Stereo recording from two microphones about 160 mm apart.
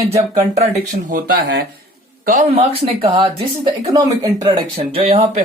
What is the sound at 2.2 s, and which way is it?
Speech, 50° right (ahead or behind).